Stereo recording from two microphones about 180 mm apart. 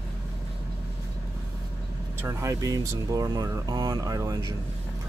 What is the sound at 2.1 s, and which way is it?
Speech, 15° right (ahead or behind).